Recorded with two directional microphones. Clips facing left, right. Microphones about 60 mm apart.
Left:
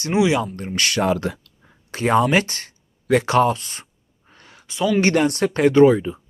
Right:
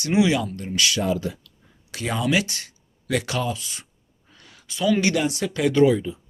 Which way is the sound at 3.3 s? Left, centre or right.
Left.